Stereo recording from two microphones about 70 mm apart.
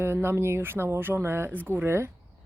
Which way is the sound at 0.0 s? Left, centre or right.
Right.